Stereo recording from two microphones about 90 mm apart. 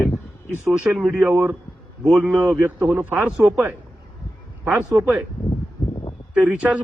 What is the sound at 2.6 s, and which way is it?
Speech, 25° right (ahead or behind).